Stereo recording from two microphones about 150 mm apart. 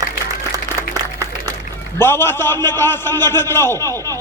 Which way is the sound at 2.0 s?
15° left (ahead or behind).